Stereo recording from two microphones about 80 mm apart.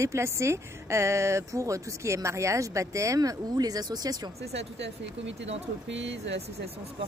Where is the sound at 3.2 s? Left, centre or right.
Right.